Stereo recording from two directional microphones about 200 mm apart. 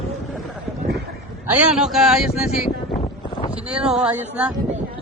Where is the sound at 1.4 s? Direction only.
5° right (ahead or behind).